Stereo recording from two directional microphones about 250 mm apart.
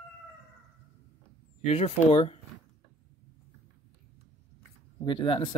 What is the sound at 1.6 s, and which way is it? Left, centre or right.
Speech, left.